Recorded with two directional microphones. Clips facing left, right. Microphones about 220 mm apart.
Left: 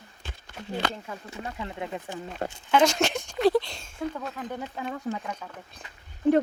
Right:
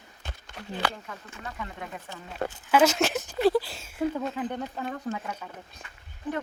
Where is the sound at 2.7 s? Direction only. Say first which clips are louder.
Even; 5° right (ahead or behind).